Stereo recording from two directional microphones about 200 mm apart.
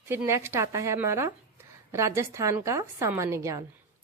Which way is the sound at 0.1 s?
10° right (ahead or behind).